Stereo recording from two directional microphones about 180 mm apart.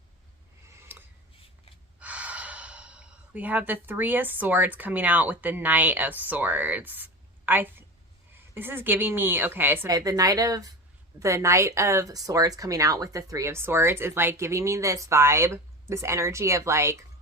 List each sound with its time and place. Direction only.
0.8 s dishes: 10° right (ahead or behind)
2.0 s speech: 10° right (ahead or behind)